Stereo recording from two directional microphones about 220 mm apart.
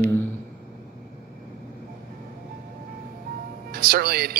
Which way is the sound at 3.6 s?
45° right (ahead or behind).